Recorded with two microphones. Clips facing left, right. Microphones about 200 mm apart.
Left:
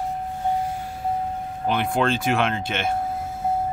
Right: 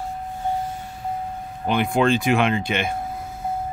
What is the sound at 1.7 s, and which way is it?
Speech, centre (ahead or behind).